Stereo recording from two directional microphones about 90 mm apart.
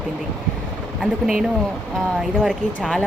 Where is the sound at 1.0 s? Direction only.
5° right (ahead or behind).